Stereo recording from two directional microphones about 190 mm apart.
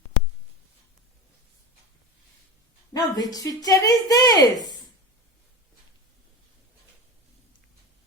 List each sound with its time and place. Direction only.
2.9 s speech: 20° left (ahead or behind)